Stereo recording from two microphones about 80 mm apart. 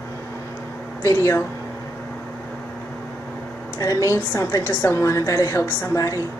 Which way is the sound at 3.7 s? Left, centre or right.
Left.